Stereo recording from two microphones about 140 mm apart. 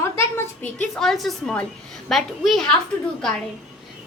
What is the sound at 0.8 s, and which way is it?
A woman's voice, 5° left (ahead or behind).